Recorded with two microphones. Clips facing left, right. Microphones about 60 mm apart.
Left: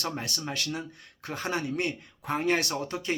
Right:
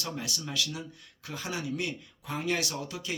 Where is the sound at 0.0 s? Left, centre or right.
Left.